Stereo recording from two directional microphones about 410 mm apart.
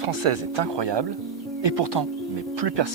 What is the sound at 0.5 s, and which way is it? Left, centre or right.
Speech, right.